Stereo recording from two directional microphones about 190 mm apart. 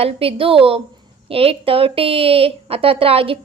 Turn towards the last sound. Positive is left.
turn(degrees=-30)  # may be behind; listen again after turning